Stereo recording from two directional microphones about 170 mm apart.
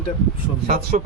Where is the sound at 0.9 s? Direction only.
45° right (ahead or behind).